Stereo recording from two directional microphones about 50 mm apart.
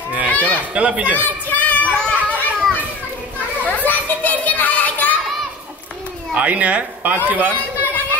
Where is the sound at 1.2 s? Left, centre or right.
Left.